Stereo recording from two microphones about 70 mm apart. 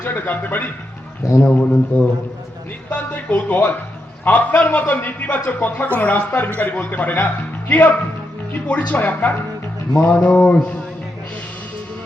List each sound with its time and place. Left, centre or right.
0.0 s a man's voice: left
1.2 s speech: left
1.5 s a man's voice: left
10.2 s mantra: centre